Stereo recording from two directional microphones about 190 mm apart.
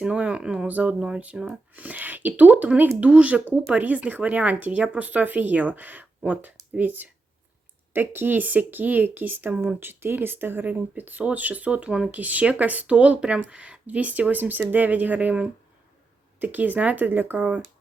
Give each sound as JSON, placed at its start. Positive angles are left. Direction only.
{"t": 0.0, "sound": "speech", "side_deg": -5}